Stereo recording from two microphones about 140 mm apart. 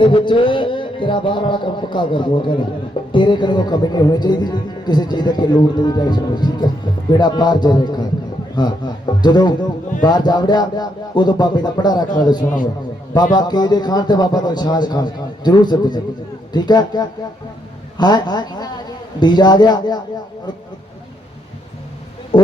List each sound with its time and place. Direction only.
0.0 s a man's voice: 35° left (ahead or behind)